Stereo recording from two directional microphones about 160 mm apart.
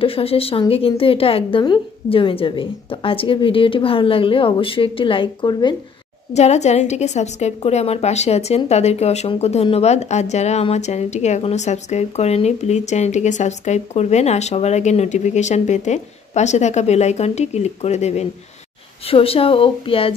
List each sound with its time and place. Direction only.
0.0 s a woman's voice: 35° left (ahead or behind)
6.3 s a woman's voice: 45° left (ahead or behind)